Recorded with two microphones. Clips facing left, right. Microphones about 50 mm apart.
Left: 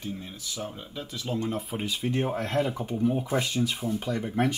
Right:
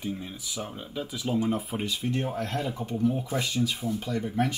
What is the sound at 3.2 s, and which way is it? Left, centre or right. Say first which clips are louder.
Speech: left 1 dB; left.